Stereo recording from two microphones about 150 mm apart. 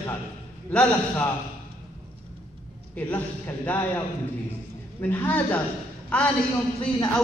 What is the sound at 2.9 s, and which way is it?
A man's voice, 10° left (ahead or behind).